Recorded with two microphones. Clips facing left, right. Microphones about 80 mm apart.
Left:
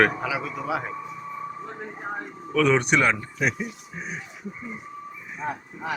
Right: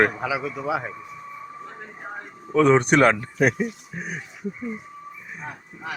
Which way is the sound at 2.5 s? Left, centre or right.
Right.